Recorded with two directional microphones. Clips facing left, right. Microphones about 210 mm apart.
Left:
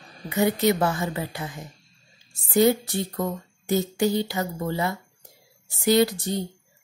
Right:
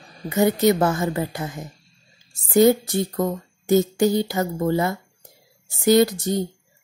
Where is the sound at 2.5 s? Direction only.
45° right (ahead or behind).